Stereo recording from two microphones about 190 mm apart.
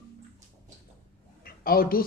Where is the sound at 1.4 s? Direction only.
50° left (ahead or behind).